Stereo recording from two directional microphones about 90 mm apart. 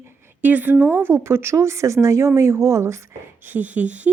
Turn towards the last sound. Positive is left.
turn(degrees=-15)  # may be behind; listen again after turning